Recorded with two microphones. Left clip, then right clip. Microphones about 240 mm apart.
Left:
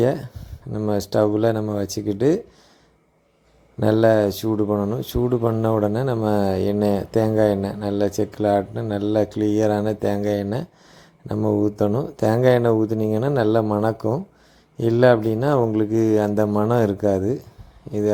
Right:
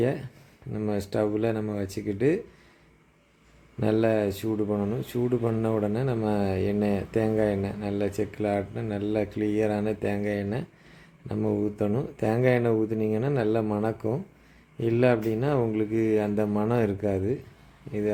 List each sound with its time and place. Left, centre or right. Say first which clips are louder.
0.0 s speech: left 7 dB; left
3.8 s speech: left 8 dB; left